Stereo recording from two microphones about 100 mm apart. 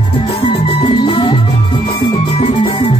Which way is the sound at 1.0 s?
55° left (ahead or behind).